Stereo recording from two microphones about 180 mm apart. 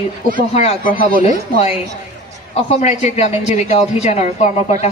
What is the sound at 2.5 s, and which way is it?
A woman's voice, 40° left (ahead or behind).